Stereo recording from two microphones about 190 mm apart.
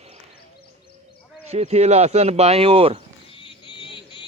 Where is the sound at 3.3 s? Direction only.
25° left (ahead or behind).